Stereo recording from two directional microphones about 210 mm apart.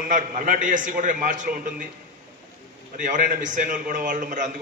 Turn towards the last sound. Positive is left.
turn(degrees=-40)  # may be behind; listen again after turning